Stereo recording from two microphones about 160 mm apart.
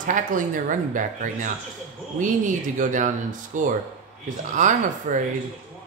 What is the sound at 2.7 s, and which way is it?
Speech, 50° right (ahead or behind).